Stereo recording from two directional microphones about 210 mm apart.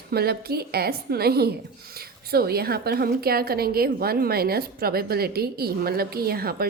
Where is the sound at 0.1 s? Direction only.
50° right (ahead or behind).